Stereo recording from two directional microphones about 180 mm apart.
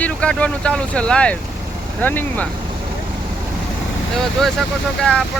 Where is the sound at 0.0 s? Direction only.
5° left (ahead or behind).